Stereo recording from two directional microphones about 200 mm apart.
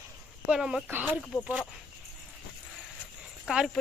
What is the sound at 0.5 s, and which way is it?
Speech, 5° right (ahead or behind).